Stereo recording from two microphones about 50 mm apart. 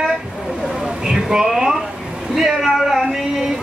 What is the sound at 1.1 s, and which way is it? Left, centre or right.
Speech, centre.